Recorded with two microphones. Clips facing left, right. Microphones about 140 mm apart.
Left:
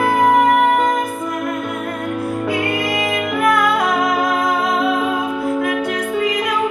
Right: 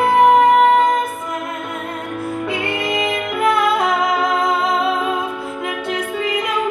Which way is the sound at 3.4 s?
25° right (ahead or behind).